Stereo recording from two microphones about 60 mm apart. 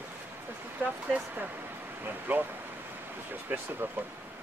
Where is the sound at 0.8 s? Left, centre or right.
Right.